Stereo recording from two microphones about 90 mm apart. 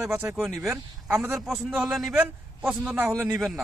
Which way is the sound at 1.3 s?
5° right (ahead or behind).